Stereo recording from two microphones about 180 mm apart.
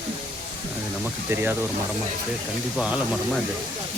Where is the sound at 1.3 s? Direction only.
10° right (ahead or behind).